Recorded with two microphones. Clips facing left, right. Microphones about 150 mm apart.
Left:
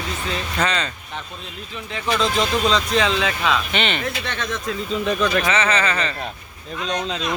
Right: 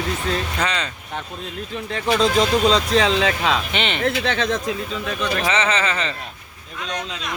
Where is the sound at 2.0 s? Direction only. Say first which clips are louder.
Right 3 dB; 50° right (ahead or behind).